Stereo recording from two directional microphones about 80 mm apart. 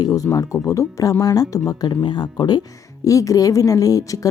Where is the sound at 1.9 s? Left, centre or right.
Left.